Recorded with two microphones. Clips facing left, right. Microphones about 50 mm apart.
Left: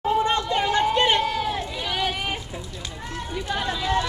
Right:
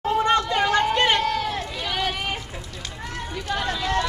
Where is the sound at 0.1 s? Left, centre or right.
Centre.